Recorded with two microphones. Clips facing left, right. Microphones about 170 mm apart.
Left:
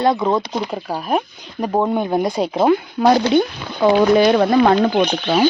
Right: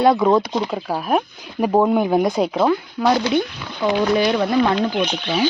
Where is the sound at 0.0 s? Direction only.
5° right (ahead or behind).